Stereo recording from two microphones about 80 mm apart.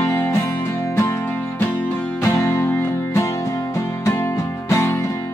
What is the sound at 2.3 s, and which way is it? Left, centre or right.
Music, left.